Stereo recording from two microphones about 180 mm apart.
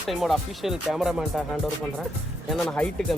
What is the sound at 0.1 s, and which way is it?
Speech, centre (ahead or behind).